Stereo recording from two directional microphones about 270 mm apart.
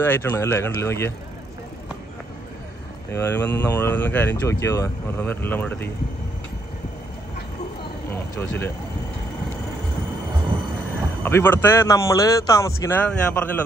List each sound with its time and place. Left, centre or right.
0.0 s speech: centre
3.1 s speech: centre
11.2 s speech: centre